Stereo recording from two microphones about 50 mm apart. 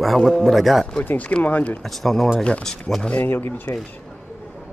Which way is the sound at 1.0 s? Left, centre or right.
Left.